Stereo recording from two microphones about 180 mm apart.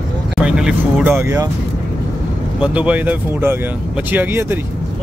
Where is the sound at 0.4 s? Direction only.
5° right (ahead or behind).